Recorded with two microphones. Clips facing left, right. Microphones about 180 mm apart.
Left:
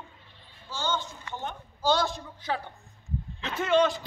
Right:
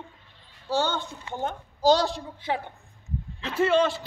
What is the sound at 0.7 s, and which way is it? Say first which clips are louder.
Speech: right 5 dB; 65° right (ahead or behind).